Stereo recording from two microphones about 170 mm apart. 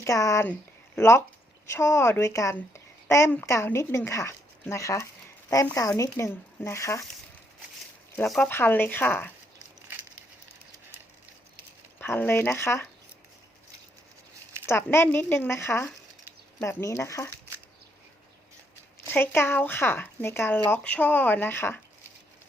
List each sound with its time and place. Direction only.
0.0 s speech: 20° left (ahead or behind)
8.3 s speech: 5° left (ahead or behind)
11.9 s speech: 10° left (ahead or behind)
14.7 s speech: 15° left (ahead or behind)
19.0 s speech: 10° left (ahead or behind)